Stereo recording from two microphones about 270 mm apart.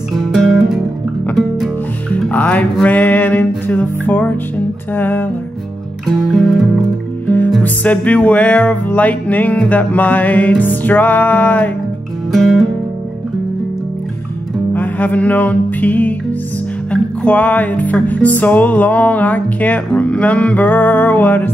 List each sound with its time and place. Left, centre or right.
0.3 s music: centre
14.7 s music: centre